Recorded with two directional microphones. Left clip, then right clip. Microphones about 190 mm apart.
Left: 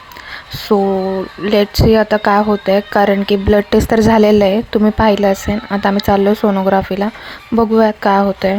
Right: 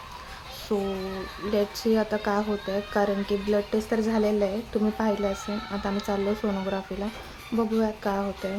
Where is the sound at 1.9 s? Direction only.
35° left (ahead or behind).